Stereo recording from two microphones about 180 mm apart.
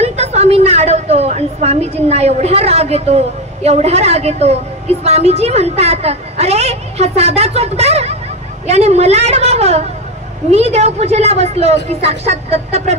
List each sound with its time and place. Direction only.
0.0 s a woman's voice: 35° right (ahead or behind)